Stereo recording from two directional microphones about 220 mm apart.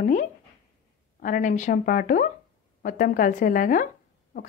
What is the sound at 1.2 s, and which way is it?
A woman's voice, 35° left (ahead or behind).